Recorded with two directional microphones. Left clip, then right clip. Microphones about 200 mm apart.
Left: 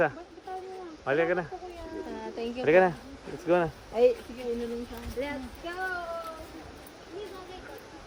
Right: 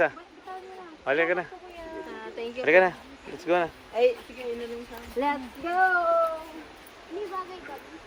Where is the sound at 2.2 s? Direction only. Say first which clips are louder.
Right 1 dB; 55° left (ahead or behind).